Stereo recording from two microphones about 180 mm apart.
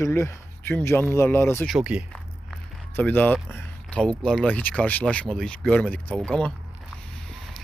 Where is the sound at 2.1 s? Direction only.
5° left (ahead or behind).